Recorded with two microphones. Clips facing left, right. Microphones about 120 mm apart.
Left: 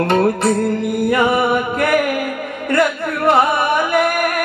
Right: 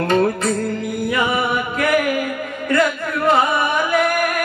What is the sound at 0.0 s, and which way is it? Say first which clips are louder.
Carnatic music: left 2 dB; 65° left (ahead or behind).